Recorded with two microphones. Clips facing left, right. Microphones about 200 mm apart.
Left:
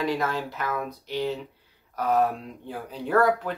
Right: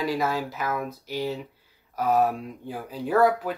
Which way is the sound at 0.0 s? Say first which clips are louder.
Right 1 dB; 5° right (ahead or behind).